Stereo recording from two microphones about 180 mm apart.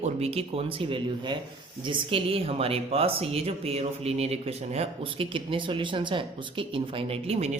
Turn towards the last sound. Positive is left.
turn(degrees=-35)  # may be behind; listen again after turning